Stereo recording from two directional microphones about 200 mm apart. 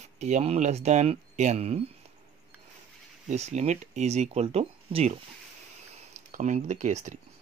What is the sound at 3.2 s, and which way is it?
Speech, 35° right (ahead or behind).